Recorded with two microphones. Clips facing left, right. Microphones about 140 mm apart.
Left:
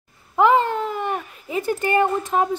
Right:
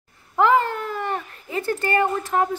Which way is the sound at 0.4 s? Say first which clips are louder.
Left 2 dB; 20° left (ahead or behind).